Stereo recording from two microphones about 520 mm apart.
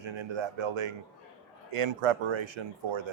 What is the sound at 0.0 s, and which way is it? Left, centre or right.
Speech, right.